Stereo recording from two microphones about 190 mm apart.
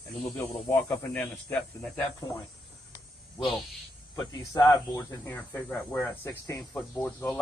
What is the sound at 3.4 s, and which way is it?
Speech, centre (ahead or behind).